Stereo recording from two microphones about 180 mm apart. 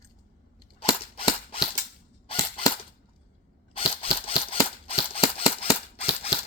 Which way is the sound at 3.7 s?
30° left (ahead or behind).